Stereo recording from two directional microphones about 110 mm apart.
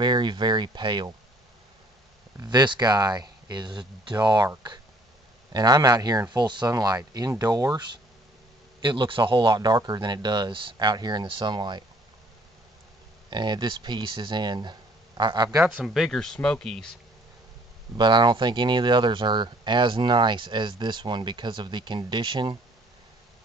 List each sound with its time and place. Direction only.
0.0 s speech: 45° right (ahead or behind)
2.4 s speech: 40° right (ahead or behind)
5.5 s speech: 35° right (ahead or behind)
8.8 s speech: 45° right (ahead or behind)
13.3 s speech: 45° right (ahead or behind)
15.8 s speech: centre (ahead or behind)
17.9 s speech: 45° right (ahead or behind)